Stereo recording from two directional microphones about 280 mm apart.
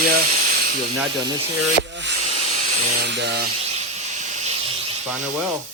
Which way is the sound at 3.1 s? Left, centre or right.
Right.